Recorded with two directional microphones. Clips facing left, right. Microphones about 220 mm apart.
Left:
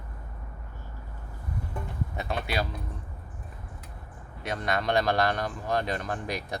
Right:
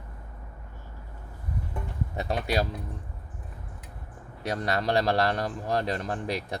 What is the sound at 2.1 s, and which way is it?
Speech, 35° right (ahead or behind).